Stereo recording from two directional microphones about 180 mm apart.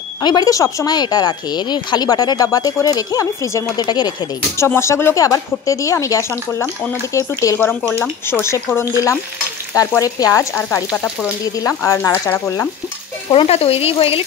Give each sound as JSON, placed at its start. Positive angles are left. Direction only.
{"t": 0.2, "sound": "speech", "side_deg": 25}
{"t": 13.3, "sound": "speech", "side_deg": 30}